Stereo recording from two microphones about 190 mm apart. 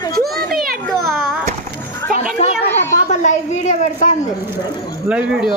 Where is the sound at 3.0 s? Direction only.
40° left (ahead or behind).